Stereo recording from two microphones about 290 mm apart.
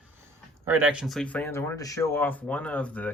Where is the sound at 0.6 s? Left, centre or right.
Centre.